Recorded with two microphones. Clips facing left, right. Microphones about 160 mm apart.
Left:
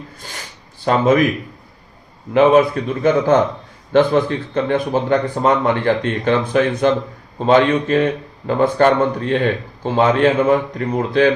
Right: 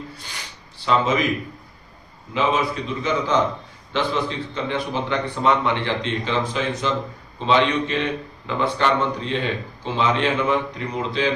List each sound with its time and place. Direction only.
0.9 s speech: 50° left (ahead or behind)
2.3 s speech: 55° left (ahead or behind)